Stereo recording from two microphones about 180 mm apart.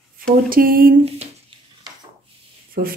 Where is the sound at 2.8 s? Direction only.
55° right (ahead or behind).